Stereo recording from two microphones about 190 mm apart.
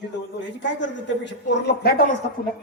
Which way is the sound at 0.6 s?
70° left (ahead or behind).